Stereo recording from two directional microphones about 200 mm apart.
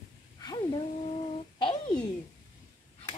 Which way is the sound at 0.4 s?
20° left (ahead or behind).